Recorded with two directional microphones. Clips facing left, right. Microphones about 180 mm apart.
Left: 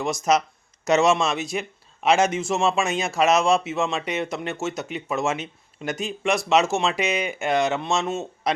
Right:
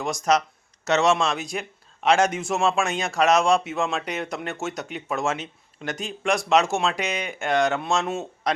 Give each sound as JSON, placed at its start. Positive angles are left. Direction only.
{"t": 0.0, "sound": "speech", "side_deg": 5}